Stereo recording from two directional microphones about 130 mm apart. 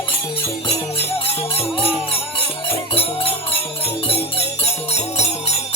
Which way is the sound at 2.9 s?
45° left (ahead or behind).